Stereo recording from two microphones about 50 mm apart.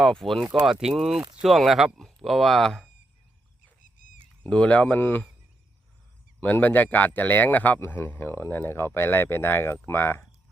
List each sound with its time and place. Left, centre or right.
0.0 s speech: centre
0.6 s speech: centre
4.4 s speech: left
4.9 s speech: left
6.4 s speech: left